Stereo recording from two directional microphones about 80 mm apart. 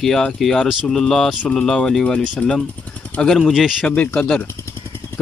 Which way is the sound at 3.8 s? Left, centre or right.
Centre.